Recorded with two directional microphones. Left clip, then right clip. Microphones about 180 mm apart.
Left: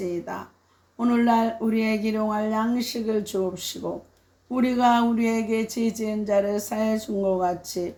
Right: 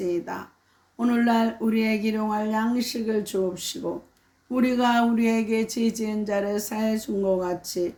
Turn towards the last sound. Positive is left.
turn(degrees=-15)  # may be behind; listen again after turning